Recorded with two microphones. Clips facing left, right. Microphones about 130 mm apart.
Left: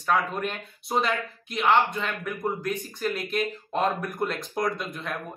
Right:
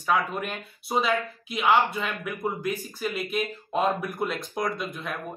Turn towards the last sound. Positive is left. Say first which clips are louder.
# left 1 dB
turn(degrees=0)  # may be behind; listen again after turning